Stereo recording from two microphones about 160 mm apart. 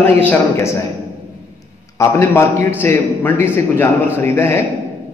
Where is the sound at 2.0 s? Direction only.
15° left (ahead or behind).